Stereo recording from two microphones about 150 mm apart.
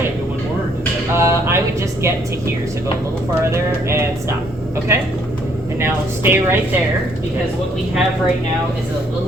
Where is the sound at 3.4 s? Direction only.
15° right (ahead or behind).